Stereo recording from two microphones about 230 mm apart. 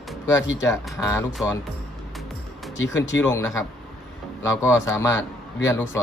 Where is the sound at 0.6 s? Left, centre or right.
Centre.